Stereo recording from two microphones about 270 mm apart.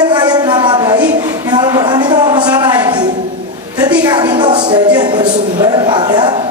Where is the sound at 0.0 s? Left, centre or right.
Centre.